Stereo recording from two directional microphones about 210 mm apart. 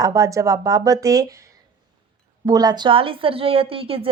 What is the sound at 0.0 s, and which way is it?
Speech, 15° right (ahead or behind).